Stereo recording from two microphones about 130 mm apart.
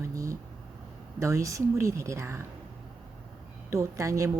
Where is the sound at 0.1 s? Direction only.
25° right (ahead or behind).